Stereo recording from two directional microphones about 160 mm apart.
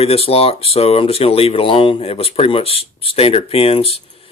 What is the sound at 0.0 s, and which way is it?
Speech, 40° left (ahead or behind).